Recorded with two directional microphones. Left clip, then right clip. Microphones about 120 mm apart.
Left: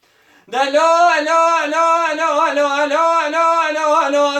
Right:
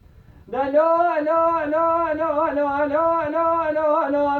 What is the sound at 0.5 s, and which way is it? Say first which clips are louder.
A man's voice: left 5 dB; 15° left (ahead or behind).